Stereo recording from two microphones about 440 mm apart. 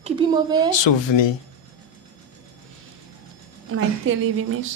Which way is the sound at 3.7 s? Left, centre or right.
Right.